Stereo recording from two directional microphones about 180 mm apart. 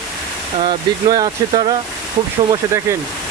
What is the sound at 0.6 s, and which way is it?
Speech, 25° right (ahead or behind).